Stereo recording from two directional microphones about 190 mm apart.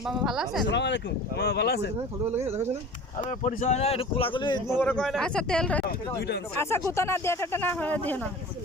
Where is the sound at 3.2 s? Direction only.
40° left (ahead or behind); by 4.6 s 25° left (ahead or behind).